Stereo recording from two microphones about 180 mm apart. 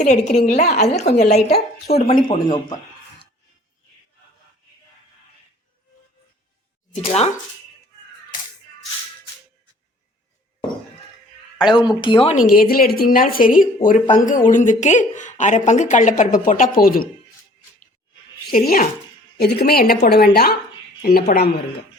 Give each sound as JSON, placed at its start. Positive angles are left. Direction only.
{"t": 0.0, "sound": "a woman's voice", "side_deg": 40}
{"t": 6.9, "sound": "a woman's voice", "side_deg": 35}
{"t": 11.7, "sound": "speech", "side_deg": 25}
{"t": 12.4, "sound": "speech", "side_deg": 55}
{"t": 18.5, "sound": "a woman's voice", "side_deg": 55}